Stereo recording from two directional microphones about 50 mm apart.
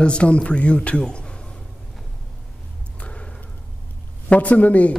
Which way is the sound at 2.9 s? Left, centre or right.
Left.